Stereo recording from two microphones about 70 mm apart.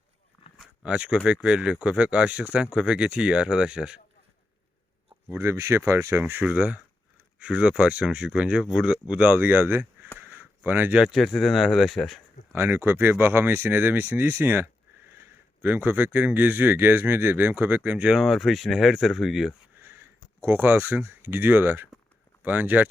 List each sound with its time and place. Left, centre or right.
0.8 s speech: centre
5.3 s speech: right
6.4 s speech: centre
10.2 s a sound: right
11.1 s speech: centre
12.5 s speech: right
18.2 s speech: centre
19.8 s a sound: right
20.6 s speech: right